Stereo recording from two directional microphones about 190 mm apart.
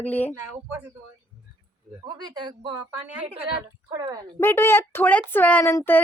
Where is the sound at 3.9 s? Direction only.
20° right (ahead or behind).